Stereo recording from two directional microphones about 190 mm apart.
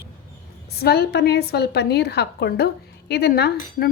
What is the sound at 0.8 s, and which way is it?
A woman's voice, 55° left (ahead or behind).